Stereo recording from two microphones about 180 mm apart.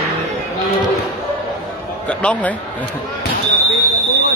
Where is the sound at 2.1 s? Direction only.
5° left (ahead or behind).